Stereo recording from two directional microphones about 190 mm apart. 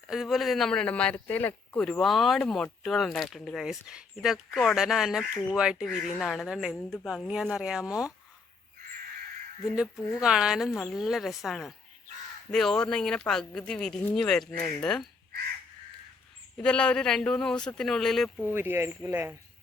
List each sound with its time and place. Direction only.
0.1 s speech: centre (ahead or behind)
9.9 s speech: 15° left (ahead or behind)
10.2 s speech: 5° right (ahead or behind)
16.6 s speech: 5° left (ahead or behind)
18.5 s speech: 10° right (ahead or behind)